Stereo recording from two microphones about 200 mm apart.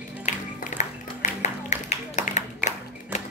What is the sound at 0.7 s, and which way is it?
Music, 35° left (ahead or behind).